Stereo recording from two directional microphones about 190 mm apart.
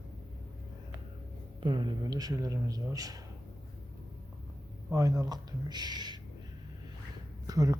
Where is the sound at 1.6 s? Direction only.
25° right (ahead or behind).